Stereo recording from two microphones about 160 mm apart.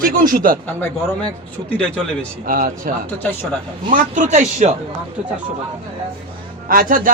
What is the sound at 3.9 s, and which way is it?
Speech, 50° right (ahead or behind).